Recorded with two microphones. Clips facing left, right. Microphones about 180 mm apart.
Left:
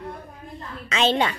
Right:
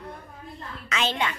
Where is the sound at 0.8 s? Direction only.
25° left (ahead or behind).